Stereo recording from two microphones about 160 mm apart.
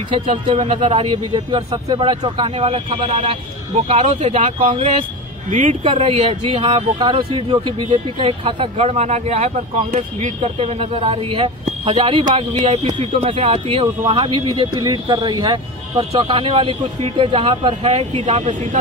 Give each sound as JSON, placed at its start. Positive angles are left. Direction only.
{"t": 0.3, "sound": "speech", "side_deg": -40}
{"t": 3.7, "sound": "speech", "side_deg": -45}
{"t": 5.5, "sound": "speech", "side_deg": -50}
{"t": 5.9, "sound": "speech", "side_deg": -35}
{"t": 12.3, "sound": "speech", "side_deg": -45}